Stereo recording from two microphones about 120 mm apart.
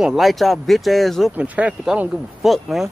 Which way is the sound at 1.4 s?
10° right (ahead or behind).